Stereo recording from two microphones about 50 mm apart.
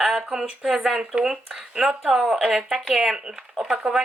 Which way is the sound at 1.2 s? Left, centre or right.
Centre.